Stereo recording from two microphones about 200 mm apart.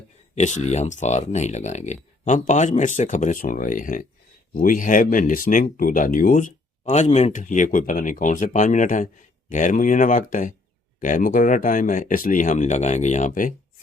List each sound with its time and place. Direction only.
0.3 s speech: 35° left (ahead or behind)